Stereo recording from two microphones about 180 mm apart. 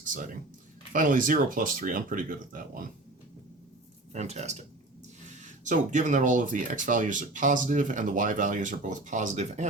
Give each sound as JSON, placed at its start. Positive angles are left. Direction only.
{"t": 0.0, "sound": "a sound", "side_deg": -45}
{"t": 0.9, "sound": "speech", "side_deg": -50}
{"t": 4.1, "sound": "speech", "side_deg": -40}